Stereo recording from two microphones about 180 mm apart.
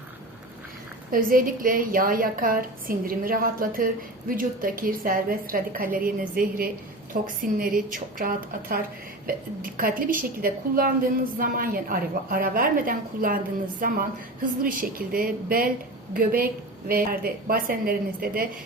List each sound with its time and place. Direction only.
1.1 s a woman's voice: 50° right (ahead or behind)